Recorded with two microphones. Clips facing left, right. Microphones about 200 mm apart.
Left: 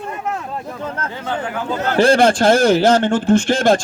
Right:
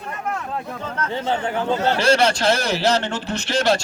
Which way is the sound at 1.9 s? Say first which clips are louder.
Left 6 dB; 50° left (ahead or behind).